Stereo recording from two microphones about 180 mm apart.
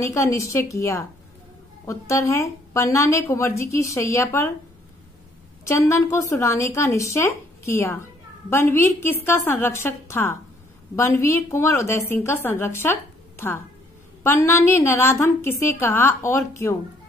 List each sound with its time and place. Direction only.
0.0 s a woman's voice: 15° left (ahead or behind)
5.7 s a woman's voice: 15° left (ahead or behind)